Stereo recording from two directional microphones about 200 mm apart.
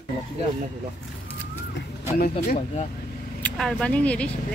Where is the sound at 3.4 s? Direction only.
5° left (ahead or behind).